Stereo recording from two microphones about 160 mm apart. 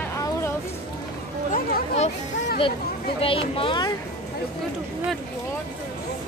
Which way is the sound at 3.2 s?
35° left (ahead or behind).